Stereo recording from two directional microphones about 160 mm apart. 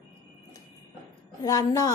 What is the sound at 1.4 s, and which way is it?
Speech, 25° left (ahead or behind).